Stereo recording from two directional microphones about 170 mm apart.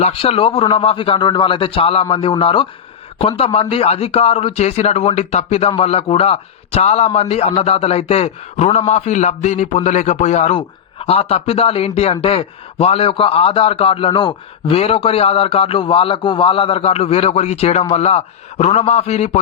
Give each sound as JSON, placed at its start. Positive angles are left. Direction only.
{"t": 0.0, "sound": "a man's voice", "side_deg": 35}